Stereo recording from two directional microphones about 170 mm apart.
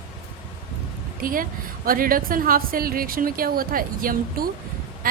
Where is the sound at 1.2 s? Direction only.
55° right (ahead or behind).